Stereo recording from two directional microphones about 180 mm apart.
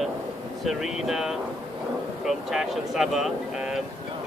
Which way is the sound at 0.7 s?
Centre (ahead or behind).